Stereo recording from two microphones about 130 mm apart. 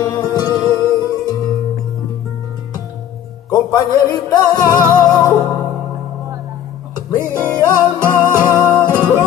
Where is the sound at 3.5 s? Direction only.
30° left (ahead or behind).